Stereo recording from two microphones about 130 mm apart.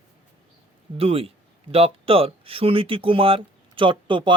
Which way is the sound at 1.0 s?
45° right (ahead or behind).